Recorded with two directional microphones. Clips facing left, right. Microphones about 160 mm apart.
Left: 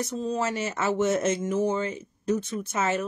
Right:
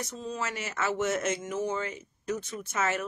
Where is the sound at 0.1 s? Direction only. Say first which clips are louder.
Left 7 dB; 35° left (ahead or behind).